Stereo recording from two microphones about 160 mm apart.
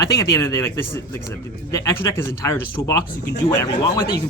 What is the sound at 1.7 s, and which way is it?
Speech, 20° left (ahead or behind).